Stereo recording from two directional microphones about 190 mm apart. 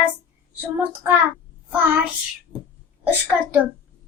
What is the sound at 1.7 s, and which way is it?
Child singing, 10° right (ahead or behind).